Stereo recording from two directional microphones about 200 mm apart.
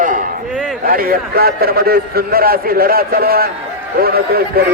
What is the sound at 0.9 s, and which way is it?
A man's voice, 45° right (ahead or behind).